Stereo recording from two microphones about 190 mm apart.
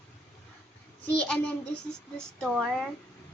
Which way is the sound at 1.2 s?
5° left (ahead or behind).